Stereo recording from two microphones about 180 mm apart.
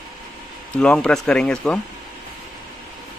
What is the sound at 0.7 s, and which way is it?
Speech, 5° left (ahead or behind).